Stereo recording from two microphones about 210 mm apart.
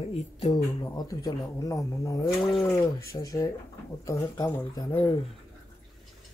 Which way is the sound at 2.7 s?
15° left (ahead or behind).